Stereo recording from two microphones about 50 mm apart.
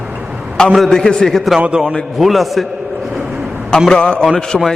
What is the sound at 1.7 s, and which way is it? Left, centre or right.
Speech, centre.